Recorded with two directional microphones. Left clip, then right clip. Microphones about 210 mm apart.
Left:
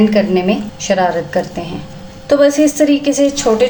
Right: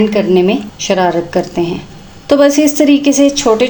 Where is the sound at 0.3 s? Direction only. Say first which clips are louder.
Right 4 dB; 30° right (ahead or behind).